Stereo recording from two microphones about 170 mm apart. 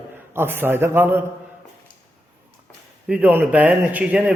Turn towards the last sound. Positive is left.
turn(degrees=-5)  # may be behind; listen again after turning